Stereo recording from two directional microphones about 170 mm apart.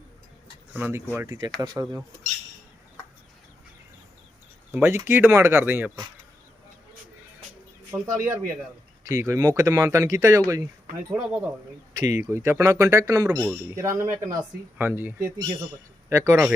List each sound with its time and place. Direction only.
0.7 s speech: 10° right (ahead or behind)
4.7 s speech: 15° right (ahead or behind)
7.9 s speech: 15° right (ahead or behind)
11.1 s speech: 5° right (ahead or behind)